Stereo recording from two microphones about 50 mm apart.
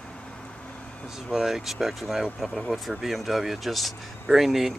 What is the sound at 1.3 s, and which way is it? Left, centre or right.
Speech, centre.